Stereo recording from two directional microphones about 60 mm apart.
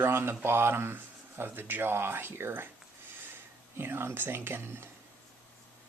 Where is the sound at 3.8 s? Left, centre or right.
Right.